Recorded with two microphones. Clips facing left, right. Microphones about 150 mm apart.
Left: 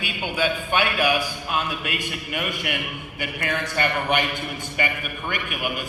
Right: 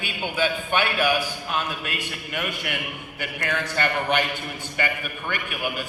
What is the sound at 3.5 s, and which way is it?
A man's voice, 15° left (ahead or behind).